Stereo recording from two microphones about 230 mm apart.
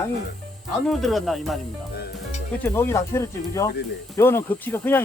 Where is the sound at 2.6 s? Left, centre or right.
Centre.